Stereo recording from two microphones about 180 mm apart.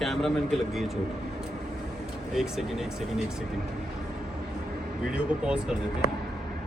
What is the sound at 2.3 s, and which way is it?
Speech, centre (ahead or behind).